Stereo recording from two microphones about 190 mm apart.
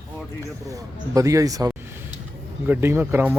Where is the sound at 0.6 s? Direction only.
15° right (ahead or behind).